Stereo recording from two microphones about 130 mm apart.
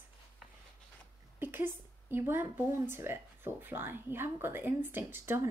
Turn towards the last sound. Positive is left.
turn(degrees=-15)  # may be behind; listen again after turning